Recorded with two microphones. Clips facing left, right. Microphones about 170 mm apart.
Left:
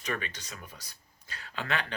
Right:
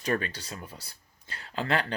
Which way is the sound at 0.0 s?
35° right (ahead or behind).